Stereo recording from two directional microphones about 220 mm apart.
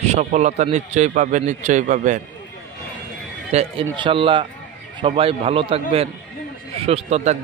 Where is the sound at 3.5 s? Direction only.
25° right (ahead or behind).